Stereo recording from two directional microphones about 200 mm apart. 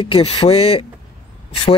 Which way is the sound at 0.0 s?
25° left (ahead or behind).